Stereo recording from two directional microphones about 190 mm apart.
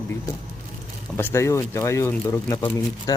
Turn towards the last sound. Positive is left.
turn(degrees=20)  # may be behind; listen again after turning